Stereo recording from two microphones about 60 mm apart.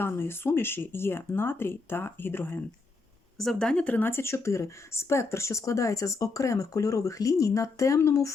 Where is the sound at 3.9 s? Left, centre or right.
Left.